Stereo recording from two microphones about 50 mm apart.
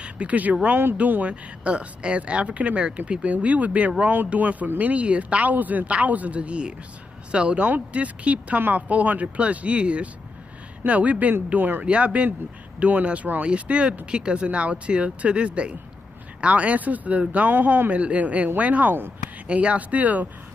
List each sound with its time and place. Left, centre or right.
0.0 s speech: right
0.7 s speech: right
0.9 s a woman's voice: right
11.8 s a woman's voice: right